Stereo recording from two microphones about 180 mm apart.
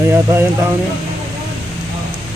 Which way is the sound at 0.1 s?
15° right (ahead or behind).